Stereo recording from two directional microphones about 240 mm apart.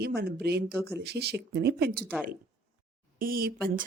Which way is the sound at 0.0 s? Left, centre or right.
Right.